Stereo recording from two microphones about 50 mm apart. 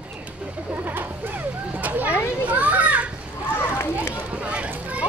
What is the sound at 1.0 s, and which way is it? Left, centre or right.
Music, right.